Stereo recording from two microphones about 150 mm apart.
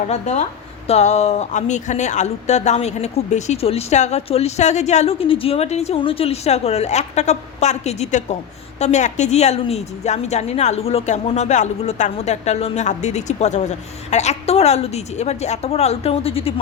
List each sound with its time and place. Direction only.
0.1 s a woman's voice: 50° left (ahead or behind)